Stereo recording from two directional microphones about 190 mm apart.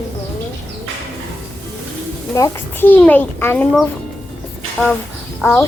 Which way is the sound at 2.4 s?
10° left (ahead or behind).